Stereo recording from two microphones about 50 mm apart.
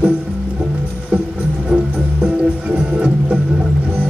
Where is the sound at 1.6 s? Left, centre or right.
Right.